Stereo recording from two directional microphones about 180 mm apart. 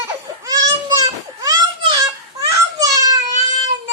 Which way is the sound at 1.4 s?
20° right (ahead or behind).